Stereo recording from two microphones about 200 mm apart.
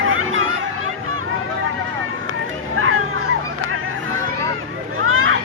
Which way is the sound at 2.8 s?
90° right.